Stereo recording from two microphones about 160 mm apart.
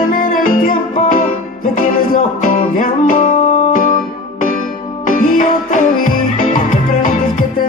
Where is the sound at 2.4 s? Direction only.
60° left (ahead or behind).